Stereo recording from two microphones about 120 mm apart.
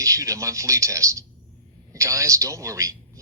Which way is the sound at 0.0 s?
25° right (ahead or behind).